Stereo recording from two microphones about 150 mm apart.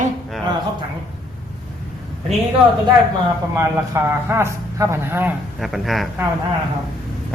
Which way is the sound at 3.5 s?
15° right (ahead or behind).